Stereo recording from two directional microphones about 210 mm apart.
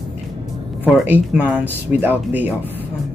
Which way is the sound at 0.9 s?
5° right (ahead or behind).